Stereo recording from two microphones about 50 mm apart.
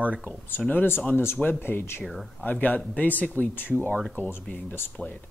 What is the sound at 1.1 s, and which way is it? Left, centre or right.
Speech, left.